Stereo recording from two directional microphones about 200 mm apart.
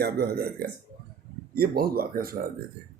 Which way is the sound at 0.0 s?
50° right (ahead or behind).